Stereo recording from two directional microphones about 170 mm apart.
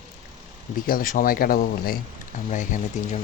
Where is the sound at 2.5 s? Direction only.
45° left (ahead or behind).